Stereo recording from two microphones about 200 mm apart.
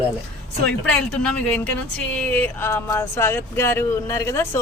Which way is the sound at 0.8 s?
5° left (ahead or behind).